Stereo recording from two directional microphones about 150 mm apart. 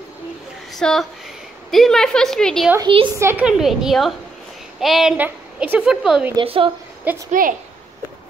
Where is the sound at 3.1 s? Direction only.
15° right (ahead or behind).